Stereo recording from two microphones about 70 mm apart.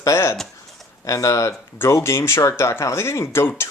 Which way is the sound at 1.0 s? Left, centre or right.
Left.